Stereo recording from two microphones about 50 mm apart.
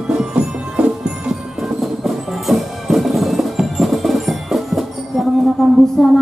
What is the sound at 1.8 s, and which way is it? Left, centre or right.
Music, centre.